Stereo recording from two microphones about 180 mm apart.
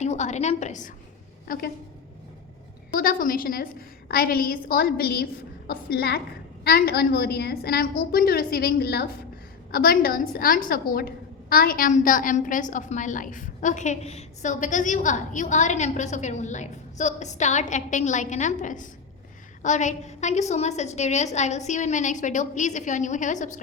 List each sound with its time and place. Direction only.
0.0 s a woman's voice: 40° left (ahead or behind)
2.9 s a woman's voice: 50° left (ahead or behind)